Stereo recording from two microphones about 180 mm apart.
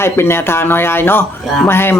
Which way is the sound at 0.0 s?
15° left (ahead or behind).